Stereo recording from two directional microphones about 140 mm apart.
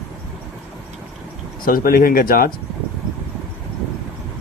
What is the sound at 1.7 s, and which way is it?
Speech, 90° left.